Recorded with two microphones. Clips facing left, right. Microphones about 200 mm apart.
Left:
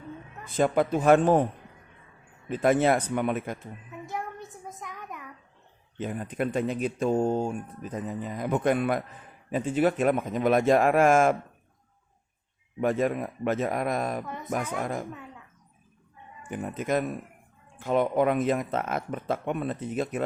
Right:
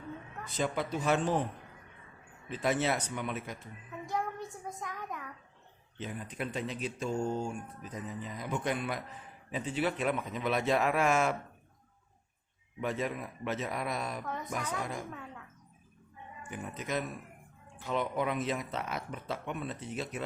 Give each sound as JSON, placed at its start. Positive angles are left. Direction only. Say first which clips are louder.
{"t": 0.5, "sound": "speech", "louder": "left 9 dB", "side_deg": 50}
{"t": 2.5, "sound": "speech", "louder": "left 8 dB", "side_deg": 50}
{"t": 4.6, "sound": "a sound", "louder": "even", "side_deg": 0}
{"t": 6.0, "sound": "speech", "louder": "left 8 dB", "side_deg": 55}
{"t": 12.8, "sound": "speech", "louder": "left 9 dB", "side_deg": 50}
{"t": 16.4, "sound": "speech", "louder": "left 8 dB", "side_deg": 50}